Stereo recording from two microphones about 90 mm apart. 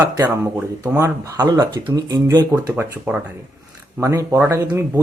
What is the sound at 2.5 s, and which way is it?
Speech, 35° right (ahead or behind).